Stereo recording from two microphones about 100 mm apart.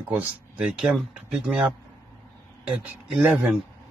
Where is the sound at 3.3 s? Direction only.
5° right (ahead or behind).